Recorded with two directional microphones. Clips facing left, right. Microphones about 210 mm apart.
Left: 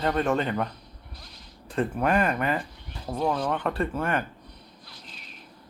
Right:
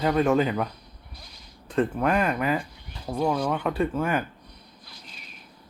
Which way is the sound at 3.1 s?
Centre (ahead or behind).